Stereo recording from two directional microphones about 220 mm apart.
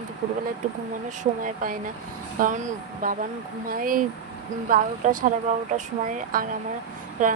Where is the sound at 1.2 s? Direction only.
40° right (ahead or behind).